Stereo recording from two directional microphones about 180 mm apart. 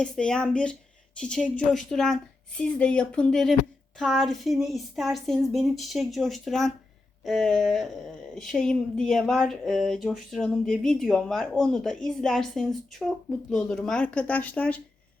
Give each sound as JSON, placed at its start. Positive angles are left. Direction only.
{"t": 0.0, "sound": "speech", "side_deg": 5}